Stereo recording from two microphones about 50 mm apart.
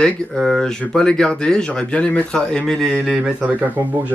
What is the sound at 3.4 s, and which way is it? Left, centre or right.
Speech, right.